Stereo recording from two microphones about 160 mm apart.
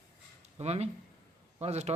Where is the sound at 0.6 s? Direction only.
40° right (ahead or behind).